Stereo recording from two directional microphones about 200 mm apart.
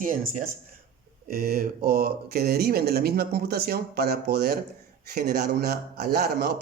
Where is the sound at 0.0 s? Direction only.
40° right (ahead or behind).